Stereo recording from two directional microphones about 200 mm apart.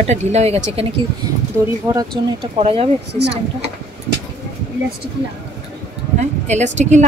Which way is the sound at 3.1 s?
60° right (ahead or behind).